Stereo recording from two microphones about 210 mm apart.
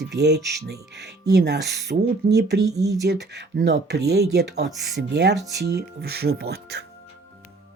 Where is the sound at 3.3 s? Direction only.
55° right (ahead or behind).